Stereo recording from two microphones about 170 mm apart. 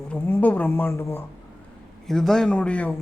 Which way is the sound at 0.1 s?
10° left (ahead or behind).